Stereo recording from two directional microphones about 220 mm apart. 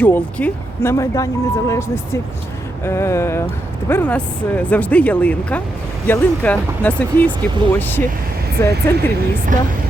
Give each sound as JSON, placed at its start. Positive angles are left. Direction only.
{"t": 0.0, "sound": "speech", "side_deg": 5}
{"t": 9.5, "sound": "speech", "side_deg": -35}